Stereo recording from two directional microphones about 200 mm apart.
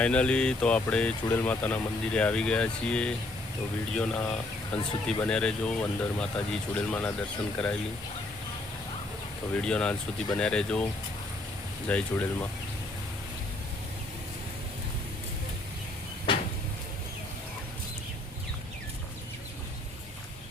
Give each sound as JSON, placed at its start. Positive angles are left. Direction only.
{"t": 0.0, "sound": "speech", "side_deg": 5}
{"t": 9.6, "sound": "speech", "side_deg": 5}
{"t": 11.9, "sound": "speech", "side_deg": 5}